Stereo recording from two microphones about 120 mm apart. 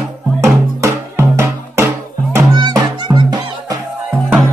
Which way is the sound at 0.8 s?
20° right (ahead or behind).